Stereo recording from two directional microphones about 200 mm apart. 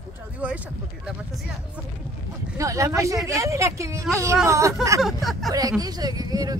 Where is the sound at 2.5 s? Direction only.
15° right (ahead or behind).